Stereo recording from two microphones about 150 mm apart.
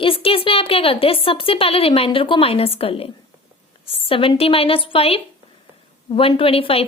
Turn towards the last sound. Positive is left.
turn(degrees=40)  # may be behind; listen again after turning